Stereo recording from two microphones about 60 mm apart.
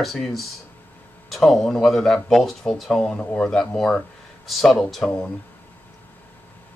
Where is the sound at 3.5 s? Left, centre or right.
Centre.